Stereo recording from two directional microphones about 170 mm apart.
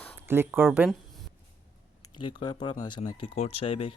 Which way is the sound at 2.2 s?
30° left (ahead or behind).